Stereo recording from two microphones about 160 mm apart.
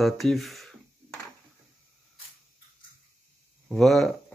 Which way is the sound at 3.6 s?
Centre (ahead or behind).